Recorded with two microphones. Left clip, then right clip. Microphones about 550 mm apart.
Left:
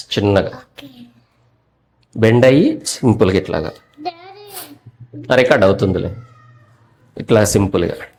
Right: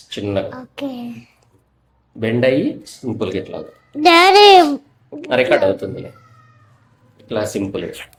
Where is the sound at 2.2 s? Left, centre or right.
Left.